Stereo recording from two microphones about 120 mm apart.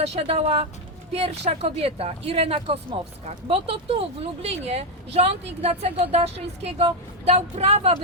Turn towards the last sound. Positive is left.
turn(degrees=-60)  # may be behind; listen again after turning